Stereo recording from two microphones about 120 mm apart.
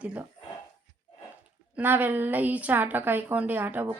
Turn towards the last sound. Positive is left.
turn(degrees=-15)  # may be behind; listen again after turning